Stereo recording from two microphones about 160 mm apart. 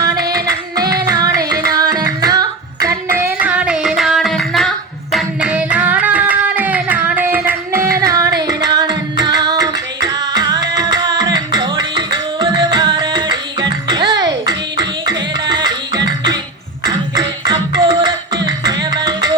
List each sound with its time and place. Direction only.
0.0 s singing: 25° right (ahead or behind)
1.0 s music: 20° right (ahead or behind); by 4.7 s centre (ahead or behind)
5.1 s singing: 5° right (ahead or behind)
8.4 s music: 25° right (ahead or behind)
16.0 s beatboxing: 25° right (ahead or behind)
16.8 s music: 25° right (ahead or behind)